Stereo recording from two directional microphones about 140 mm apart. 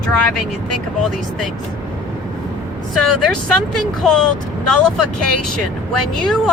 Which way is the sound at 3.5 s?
5° left (ahead or behind).